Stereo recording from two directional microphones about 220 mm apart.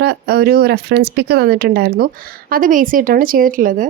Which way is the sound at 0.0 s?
45° right (ahead or behind).